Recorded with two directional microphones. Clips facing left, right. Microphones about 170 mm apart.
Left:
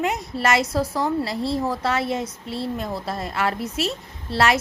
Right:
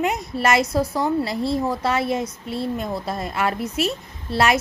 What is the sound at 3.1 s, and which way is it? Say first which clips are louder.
Speech: even; 20° right (ahead or behind).